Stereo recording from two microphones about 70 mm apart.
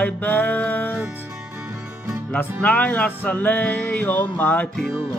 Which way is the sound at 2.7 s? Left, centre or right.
Left.